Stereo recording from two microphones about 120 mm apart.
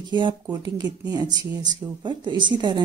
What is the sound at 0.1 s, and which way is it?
A woman's voice, 40° right (ahead or behind).